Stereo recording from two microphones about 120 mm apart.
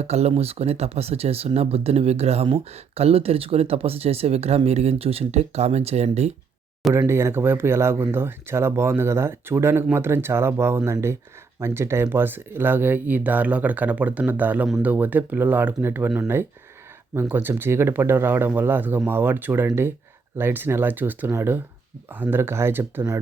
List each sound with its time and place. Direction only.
0.0 s speech: 60° right (ahead or behind)
7.1 s speech: 20° right (ahead or behind)